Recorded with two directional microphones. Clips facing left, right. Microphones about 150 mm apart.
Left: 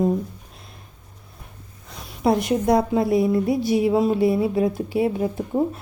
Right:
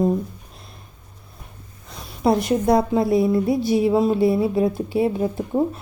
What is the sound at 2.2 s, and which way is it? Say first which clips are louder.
A woman's voice: right 1 dB; 35° right (ahead or behind).